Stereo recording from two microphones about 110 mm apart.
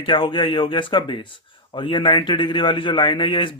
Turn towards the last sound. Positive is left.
turn(degrees=50)  # may be behind; listen again after turning